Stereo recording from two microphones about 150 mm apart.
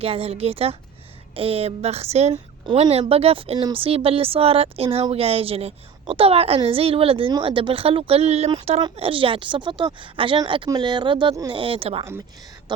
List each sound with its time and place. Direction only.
0.0 s a woman's voice: 40° right (ahead or behind)